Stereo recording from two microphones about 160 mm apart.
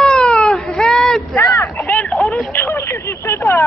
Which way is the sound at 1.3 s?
15° left (ahead or behind).